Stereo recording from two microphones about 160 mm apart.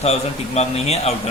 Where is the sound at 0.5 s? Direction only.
40° left (ahead or behind).